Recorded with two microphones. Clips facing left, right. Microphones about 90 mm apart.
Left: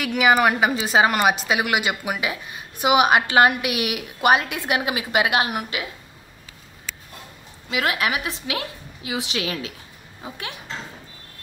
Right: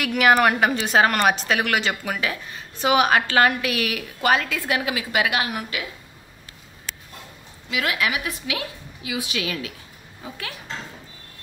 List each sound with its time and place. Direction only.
0.0 s a woman's voice: centre (ahead or behind); by 5.9 s 20° left (ahead or behind)
7.7 s a woman's voice: 30° left (ahead or behind)